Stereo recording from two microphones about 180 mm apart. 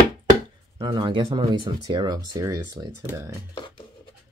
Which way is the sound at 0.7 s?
25° right (ahead or behind).